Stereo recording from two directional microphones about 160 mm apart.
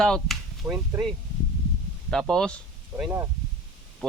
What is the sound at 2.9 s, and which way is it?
Speech, 15° right (ahead or behind).